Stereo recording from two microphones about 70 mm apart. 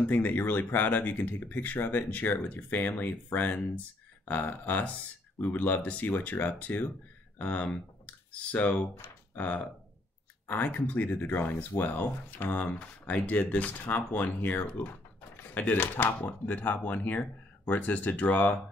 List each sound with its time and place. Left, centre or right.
0.0 s speech: left